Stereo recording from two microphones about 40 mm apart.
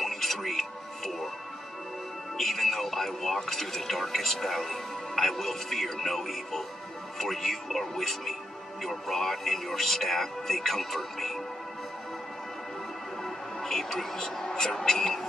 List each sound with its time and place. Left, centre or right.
0.0 s music: centre
2.3 s speech: centre
13.2 s speech: centre